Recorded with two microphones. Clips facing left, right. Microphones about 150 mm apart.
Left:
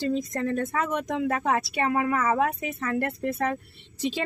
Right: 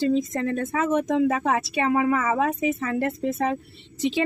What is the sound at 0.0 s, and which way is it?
Speech, 20° right (ahead or behind).